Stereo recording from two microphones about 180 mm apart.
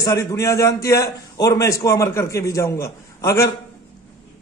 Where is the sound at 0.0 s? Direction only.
20° left (ahead or behind).